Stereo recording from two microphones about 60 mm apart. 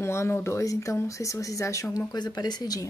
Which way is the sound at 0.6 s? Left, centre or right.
Left.